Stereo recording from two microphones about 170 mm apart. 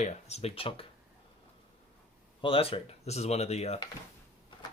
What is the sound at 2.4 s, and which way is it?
Speech, 35° left (ahead or behind).